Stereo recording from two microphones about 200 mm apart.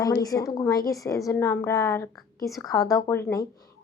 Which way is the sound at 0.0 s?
20° left (ahead or behind).